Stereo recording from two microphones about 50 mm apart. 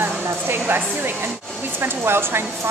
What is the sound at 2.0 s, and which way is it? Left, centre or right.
Speech, right.